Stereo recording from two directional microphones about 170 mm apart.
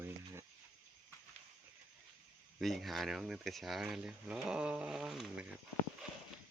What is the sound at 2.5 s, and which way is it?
Speech, centre (ahead or behind).